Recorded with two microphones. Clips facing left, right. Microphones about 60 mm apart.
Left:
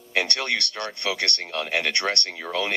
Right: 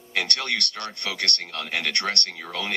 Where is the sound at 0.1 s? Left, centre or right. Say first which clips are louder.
Left 2 dB; left.